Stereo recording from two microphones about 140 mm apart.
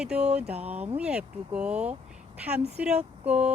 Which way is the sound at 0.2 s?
50° right (ahead or behind).